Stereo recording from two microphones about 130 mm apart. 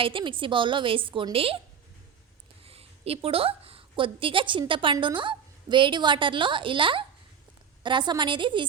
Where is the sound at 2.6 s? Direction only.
50° right (ahead or behind).